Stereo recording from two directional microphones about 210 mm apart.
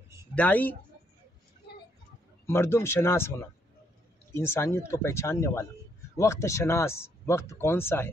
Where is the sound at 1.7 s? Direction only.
50° left (ahead or behind).